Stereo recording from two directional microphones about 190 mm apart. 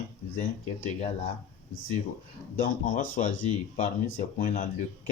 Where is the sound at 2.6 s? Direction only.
40° left (ahead or behind).